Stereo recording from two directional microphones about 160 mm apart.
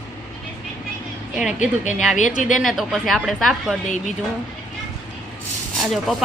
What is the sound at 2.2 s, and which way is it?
Speech, 50° left (ahead or behind).